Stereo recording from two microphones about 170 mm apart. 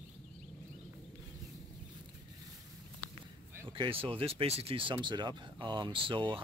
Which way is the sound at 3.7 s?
30° right (ahead or behind).